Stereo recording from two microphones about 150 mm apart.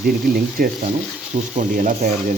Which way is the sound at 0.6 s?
70° right (ahead or behind).